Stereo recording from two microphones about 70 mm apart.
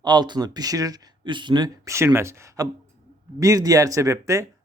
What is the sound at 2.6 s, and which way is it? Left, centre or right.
Speech, right.